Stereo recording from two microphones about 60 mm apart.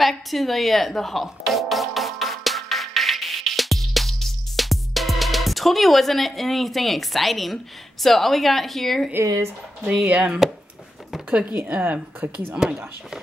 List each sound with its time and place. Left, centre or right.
0.0 s music: centre
9.8 s speech: centre
11.5 s speech: right
12.5 s speech: centre